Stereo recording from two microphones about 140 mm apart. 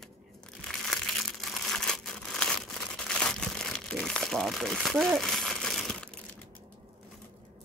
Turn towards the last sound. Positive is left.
turn(degrees=5)  # may be behind; listen again after turning